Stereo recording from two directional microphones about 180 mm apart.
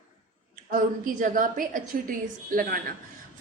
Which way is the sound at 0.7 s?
50° right (ahead or behind).